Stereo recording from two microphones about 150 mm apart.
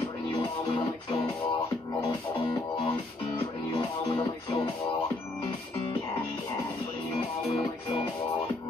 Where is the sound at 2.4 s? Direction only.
30° left (ahead or behind).